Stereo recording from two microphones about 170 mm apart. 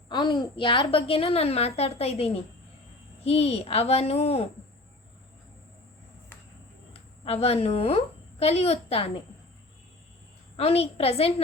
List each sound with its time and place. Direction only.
0.1 s a woman's voice: 25° left (ahead or behind)
7.3 s a woman's voice: 35° left (ahead or behind)
10.6 s a woman's voice: 35° left (ahead or behind)